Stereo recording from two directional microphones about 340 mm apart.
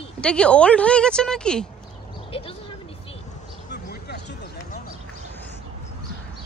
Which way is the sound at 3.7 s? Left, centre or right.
Left.